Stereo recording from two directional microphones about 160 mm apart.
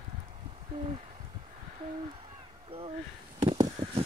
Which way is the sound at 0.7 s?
35° right (ahead or behind).